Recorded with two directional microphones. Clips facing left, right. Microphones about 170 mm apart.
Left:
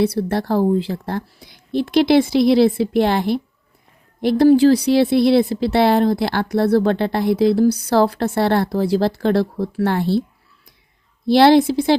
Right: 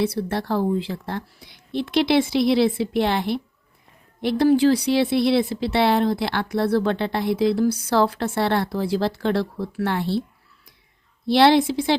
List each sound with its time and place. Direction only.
0.0 s speech: 40° left (ahead or behind)
11.3 s speech: 40° left (ahead or behind)